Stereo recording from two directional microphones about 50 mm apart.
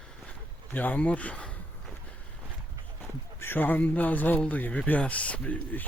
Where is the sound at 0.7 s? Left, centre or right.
Left.